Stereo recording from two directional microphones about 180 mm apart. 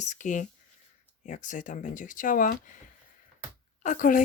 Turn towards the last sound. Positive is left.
turn(degrees=45)  # may be behind; listen again after turning